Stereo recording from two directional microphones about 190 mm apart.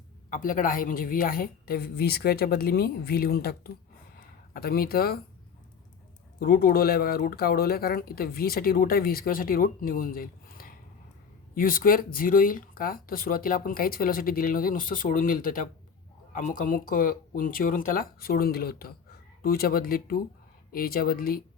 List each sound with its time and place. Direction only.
0.3 s speech: 45° left (ahead or behind)
6.4 s speech: 50° left (ahead or behind)